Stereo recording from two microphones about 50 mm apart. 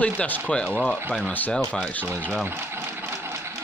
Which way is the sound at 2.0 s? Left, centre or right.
Right.